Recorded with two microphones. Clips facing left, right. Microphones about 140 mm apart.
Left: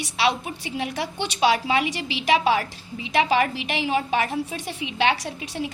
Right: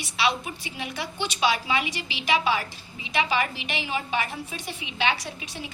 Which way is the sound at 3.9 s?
35° left (ahead or behind).